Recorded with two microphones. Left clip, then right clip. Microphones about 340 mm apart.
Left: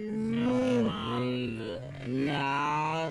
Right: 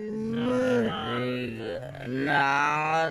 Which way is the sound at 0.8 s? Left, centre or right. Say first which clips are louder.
Right 3 dB; right.